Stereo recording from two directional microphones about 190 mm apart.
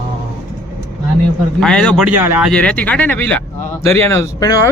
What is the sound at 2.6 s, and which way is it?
Speech, 5° left (ahead or behind).